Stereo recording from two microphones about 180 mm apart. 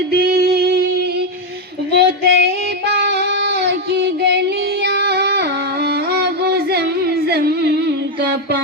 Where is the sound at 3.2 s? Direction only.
70° right (ahead or behind).